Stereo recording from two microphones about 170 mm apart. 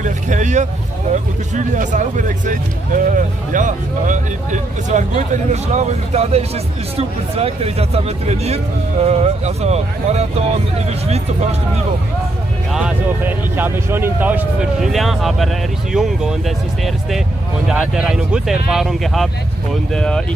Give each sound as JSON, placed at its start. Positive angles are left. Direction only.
{"t": 0.0, "sound": "speech", "side_deg": -45}
{"t": 12.7, "sound": "speech", "side_deg": -10}